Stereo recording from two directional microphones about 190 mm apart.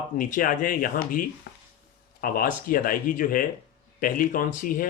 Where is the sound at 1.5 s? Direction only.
60° left (ahead or behind).